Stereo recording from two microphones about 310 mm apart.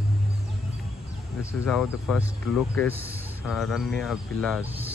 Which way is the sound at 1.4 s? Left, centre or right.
Centre.